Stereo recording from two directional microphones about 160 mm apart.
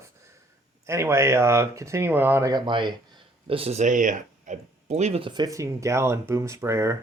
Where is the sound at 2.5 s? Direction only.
30° right (ahead or behind).